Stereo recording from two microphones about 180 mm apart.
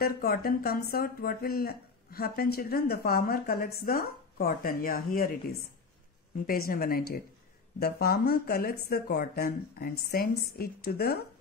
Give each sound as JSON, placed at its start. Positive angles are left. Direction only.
{"t": 0.0, "sound": "speech", "side_deg": 60}
{"t": 6.4, "sound": "speech", "side_deg": 55}